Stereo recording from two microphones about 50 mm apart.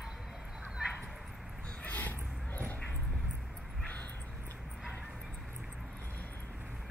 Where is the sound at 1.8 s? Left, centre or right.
Left.